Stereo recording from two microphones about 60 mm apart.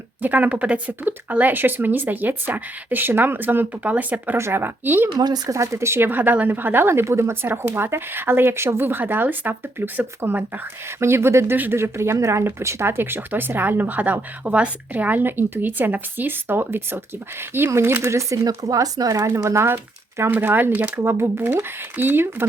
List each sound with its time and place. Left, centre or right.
0.2 s speech: right
4.4 s speech: right
5.3 s speech: right
6.1 s speech: right
10.8 s speech: right
11.5 s speech: right
11.8 s speech: right
17.7 s speech: right
19.3 s speech: right